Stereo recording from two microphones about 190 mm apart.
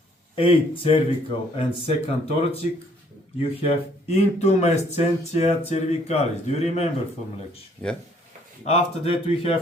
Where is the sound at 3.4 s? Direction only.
30° left (ahead or behind).